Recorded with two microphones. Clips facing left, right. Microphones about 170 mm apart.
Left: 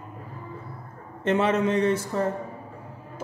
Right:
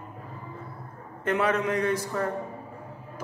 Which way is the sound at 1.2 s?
25° left (ahead or behind).